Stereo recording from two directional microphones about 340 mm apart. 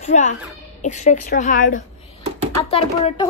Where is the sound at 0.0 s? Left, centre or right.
Left.